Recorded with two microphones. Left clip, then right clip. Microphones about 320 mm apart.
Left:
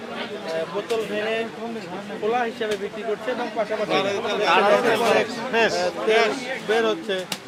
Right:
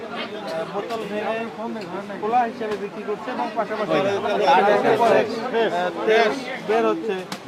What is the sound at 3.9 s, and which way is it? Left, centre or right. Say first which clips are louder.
Speech: right 2 dB; centre.